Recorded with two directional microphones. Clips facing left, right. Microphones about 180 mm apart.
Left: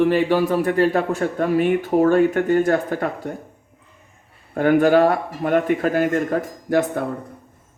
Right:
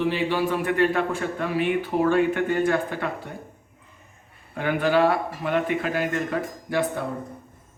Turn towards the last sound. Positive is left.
turn(degrees=45)  # may be behind; listen again after turning